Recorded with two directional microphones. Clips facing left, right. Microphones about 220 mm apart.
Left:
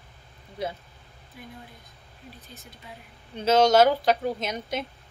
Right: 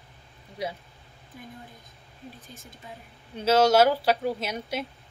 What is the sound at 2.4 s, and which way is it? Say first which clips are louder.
Speech: even; 45° right (ahead or behind).